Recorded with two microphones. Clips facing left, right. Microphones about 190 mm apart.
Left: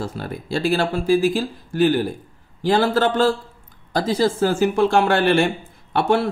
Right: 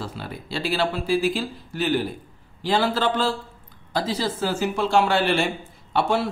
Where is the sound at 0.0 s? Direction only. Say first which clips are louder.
Left 5 dB; 45° left (ahead or behind).